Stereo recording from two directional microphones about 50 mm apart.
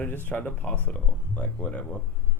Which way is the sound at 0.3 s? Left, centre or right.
Left.